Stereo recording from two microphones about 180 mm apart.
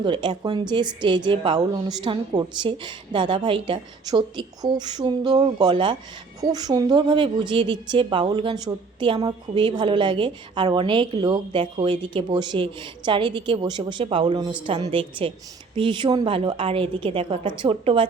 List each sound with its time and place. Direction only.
0.0 s a woman's voice: 25° right (ahead or behind)